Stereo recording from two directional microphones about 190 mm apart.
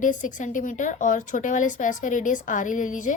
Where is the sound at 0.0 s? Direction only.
40° left (ahead or behind).